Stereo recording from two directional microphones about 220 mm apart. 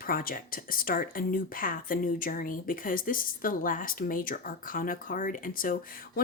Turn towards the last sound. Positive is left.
turn(degrees=40)  # may be behind; listen again after turning